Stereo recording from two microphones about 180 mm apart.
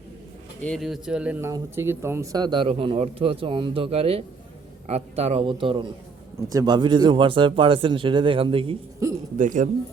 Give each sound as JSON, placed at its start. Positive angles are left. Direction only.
{"t": 0.6, "sound": "speech", "side_deg": 0}
{"t": 9.0, "sound": "a sound", "side_deg": -15}
{"t": 9.4, "sound": "speech", "side_deg": -45}